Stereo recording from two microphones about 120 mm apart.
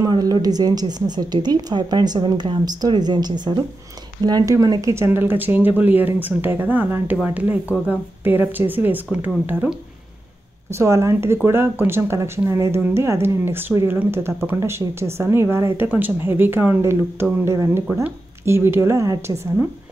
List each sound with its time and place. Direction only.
0.1 s a woman's voice: 35° right (ahead or behind); by 7.2 s 15° right (ahead or behind)
8.2 s speech: 15° right (ahead or behind)